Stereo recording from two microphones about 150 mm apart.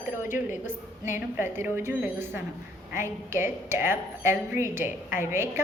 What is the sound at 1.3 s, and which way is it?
A woman's voice, 15° right (ahead or behind).